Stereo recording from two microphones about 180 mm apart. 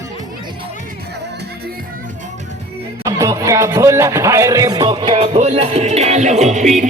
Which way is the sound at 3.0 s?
20° right (ahead or behind).